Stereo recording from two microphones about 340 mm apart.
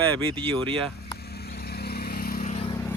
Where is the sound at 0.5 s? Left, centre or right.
Centre.